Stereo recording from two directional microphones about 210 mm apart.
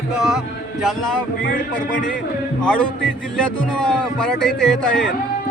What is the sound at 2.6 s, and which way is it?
Speech, 5° left (ahead or behind).